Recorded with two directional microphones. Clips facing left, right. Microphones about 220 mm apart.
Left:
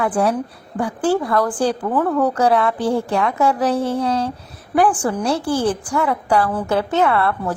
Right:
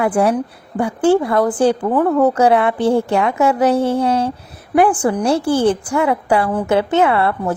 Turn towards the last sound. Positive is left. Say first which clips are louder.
# right 2 dB
turn(degrees=-25)  # may be behind; listen again after turning